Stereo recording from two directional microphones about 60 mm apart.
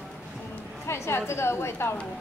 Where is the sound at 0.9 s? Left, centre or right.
Left.